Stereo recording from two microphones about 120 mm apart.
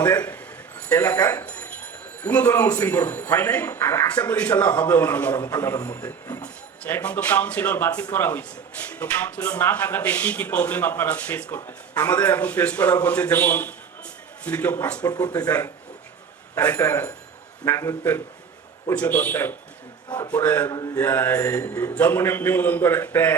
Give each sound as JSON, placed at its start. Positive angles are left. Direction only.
{"t": 0.0, "sound": "a man's voice", "side_deg": 15}
{"t": 15.0, "sound": "speech", "side_deg": 30}
{"t": 16.6, "sound": "a man's voice", "side_deg": 15}
{"t": 20.1, "sound": "speech", "side_deg": 35}
{"t": 20.3, "sound": "speech", "side_deg": 15}
{"t": 20.7, "sound": "speech", "side_deg": 30}
{"t": 21.0, "sound": "speech", "side_deg": 15}